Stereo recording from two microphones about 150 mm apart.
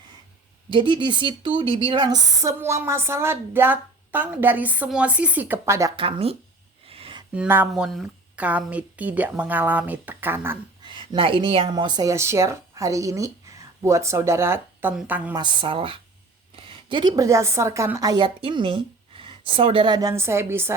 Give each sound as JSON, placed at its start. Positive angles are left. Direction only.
{"t": 0.7, "sound": "a woman's voice", "side_deg": -30}
{"t": 6.0, "sound": "a woman's voice", "side_deg": -40}
{"t": 6.8, "sound": "a sound", "side_deg": -40}
{"t": 7.3, "sound": "a woman's voice", "side_deg": -15}
{"t": 7.7, "sound": "a woman's voice", "side_deg": 0}
{"t": 10.8, "sound": "a woman's voice", "side_deg": -35}
{"t": 15.4, "sound": "a woman's voice", "side_deg": -35}